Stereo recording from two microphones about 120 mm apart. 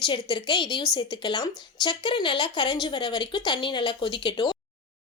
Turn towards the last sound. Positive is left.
turn(degrees=40)  # may be behind; listen again after turning